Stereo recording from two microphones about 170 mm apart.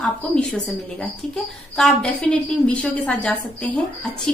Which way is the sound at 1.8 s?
Centre (ahead or behind).